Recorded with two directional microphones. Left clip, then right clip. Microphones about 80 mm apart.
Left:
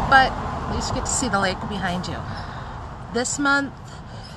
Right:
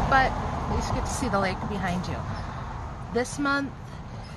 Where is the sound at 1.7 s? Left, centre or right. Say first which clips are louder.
Left 4 dB; centre.